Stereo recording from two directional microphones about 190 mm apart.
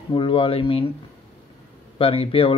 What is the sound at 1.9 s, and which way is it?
Speech, 30° left (ahead or behind).